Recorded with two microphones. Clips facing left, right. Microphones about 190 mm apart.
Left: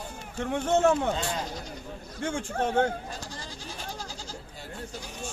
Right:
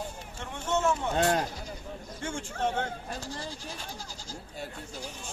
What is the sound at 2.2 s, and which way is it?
Speech, 55° left (ahead or behind).